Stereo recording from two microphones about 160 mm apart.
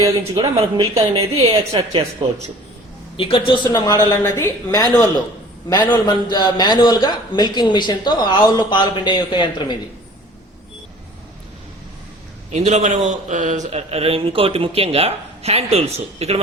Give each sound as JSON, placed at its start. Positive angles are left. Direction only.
{"t": 0.5, "sound": "a man's voice", "side_deg": -35}
{"t": 3.2, "sound": "a man's voice", "side_deg": 35}
{"t": 3.7, "sound": "a man's voice", "side_deg": 20}
{"t": 12.5, "sound": "a man's voice", "side_deg": -45}